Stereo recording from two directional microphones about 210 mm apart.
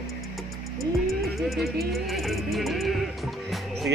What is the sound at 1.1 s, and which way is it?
Music, centre (ahead or behind).